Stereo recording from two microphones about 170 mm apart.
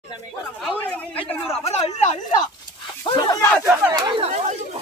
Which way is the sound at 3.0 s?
25° left (ahead or behind).